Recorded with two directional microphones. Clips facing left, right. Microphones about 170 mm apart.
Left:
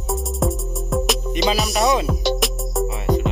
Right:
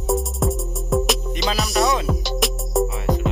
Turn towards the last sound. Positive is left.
turn(degrees=0)  # may be behind; listen again after turning